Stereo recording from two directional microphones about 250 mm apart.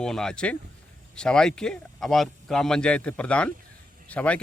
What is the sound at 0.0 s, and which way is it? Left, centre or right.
Speech, centre.